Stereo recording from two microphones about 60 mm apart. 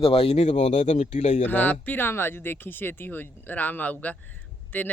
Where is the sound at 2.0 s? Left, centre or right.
Left.